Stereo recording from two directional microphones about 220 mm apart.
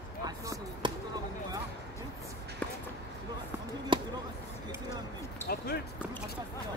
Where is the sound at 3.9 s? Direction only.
20° right (ahead or behind).